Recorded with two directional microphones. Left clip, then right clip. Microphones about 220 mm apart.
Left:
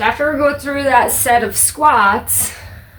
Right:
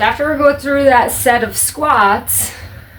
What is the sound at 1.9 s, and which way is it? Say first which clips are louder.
Speech: right 2 dB; centre (ahead or behind).